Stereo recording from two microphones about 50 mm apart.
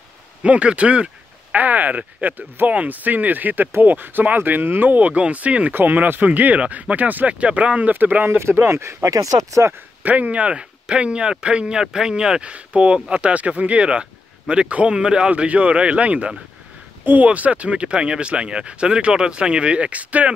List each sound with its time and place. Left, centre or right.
0.4 s speech: right
7.9 s speech: right
8.4 s speech: right
10.0 s speech: right